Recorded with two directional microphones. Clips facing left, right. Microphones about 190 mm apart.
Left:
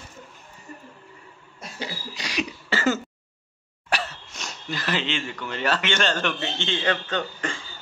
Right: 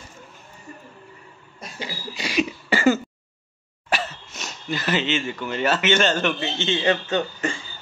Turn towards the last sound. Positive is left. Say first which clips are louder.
# right 4 dB
turn(degrees=-10)  # may be behind; listen again after turning